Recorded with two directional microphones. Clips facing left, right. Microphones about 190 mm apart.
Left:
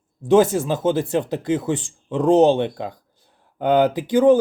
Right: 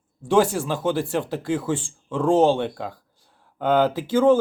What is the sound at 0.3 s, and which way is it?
Speech, 20° left (ahead or behind).